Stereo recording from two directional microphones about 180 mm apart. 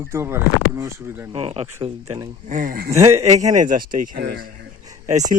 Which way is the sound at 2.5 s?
45° right (ahead or behind).